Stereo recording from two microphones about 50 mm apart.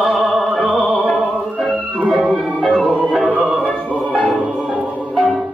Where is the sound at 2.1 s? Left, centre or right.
Centre.